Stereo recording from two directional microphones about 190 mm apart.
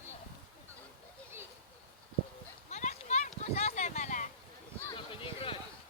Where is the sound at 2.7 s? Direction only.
35° left (ahead or behind).